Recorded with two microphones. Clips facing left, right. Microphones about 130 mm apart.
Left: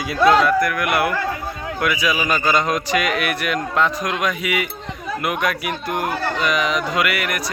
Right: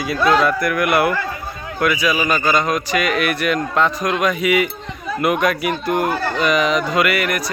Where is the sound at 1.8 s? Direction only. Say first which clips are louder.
Right 3 dB; 15° left (ahead or behind).